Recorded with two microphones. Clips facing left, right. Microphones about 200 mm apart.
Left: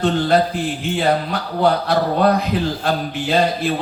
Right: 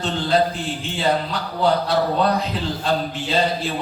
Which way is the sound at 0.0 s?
60° left (ahead or behind).